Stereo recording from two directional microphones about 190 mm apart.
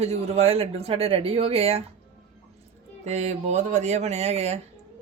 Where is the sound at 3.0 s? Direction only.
35° right (ahead or behind).